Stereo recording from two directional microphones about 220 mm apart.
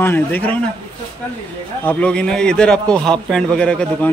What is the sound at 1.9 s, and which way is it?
A man's voice, 5° left (ahead or behind).